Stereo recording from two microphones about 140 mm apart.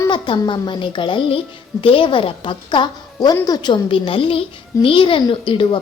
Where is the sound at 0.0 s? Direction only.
35° left (ahead or behind).